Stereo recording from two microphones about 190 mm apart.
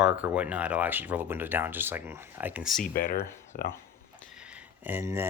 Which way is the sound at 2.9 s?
50° left (ahead or behind).